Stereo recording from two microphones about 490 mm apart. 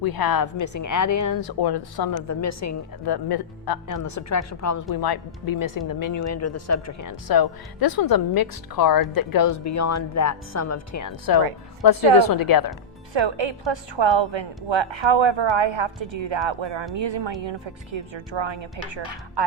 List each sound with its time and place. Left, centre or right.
0.0 s speech: left
3.1 s a woman's voice: left
13.1 s a woman's voice: right